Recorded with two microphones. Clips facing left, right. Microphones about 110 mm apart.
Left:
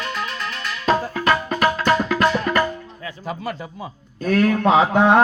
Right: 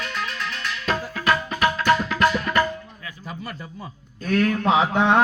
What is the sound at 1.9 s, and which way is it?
Music, 35° left (ahead or behind).